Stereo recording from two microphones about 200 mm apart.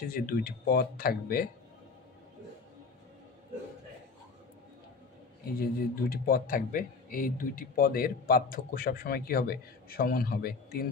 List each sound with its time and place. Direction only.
0.1 s speech: 45° left (ahead or behind)
5.6 s speech: 50° left (ahead or behind)